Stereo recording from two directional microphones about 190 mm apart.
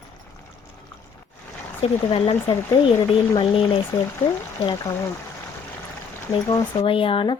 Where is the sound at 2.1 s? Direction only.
30° left (ahead or behind).